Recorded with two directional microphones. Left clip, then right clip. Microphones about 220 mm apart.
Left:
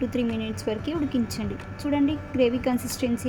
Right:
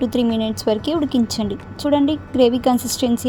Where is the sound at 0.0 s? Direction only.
35° right (ahead or behind).